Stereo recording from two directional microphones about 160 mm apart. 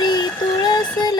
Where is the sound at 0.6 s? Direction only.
25° left (ahead or behind).